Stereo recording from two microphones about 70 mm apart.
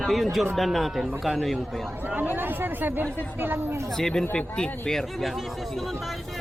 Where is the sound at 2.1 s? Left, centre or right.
Right.